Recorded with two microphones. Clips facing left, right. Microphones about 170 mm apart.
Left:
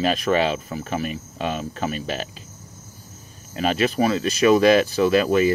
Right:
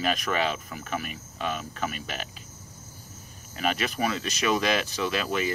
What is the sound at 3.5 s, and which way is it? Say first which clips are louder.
Speech: left 7 dB; 35° left (ahead or behind).